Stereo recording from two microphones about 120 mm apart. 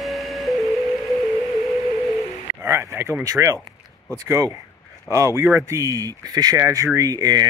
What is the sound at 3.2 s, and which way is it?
Speech, 25° right (ahead or behind).